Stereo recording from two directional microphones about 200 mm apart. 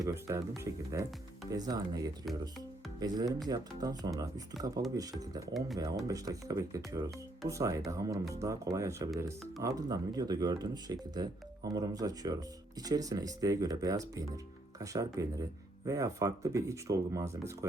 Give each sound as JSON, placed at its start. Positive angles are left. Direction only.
{"t": 0.0, "sound": "speech", "side_deg": -15}
{"t": 5.5, "sound": "speech", "side_deg": 0}
{"t": 6.1, "sound": "speech", "side_deg": -15}